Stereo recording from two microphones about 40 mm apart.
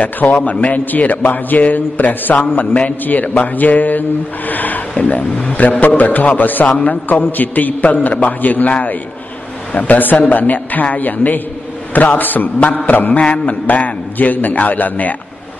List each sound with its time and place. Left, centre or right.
0.0 s a man's voice: left
4.9 s a man's voice: left